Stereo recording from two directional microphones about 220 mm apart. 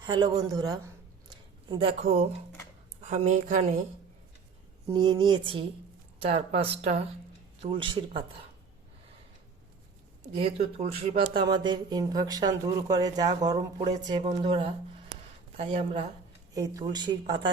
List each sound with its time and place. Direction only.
0.0 s a woman's voice: 20° right (ahead or behind)
4.9 s speech: 20° right (ahead or behind)
10.3 s speech: 30° right (ahead or behind)
16.6 s speech: 15° right (ahead or behind)